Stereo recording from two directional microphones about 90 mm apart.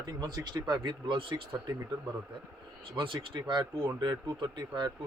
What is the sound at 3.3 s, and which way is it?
A man's voice, 50° right (ahead or behind).